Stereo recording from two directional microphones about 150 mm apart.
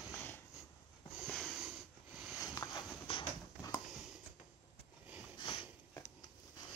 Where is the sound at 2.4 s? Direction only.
25° left (ahead or behind).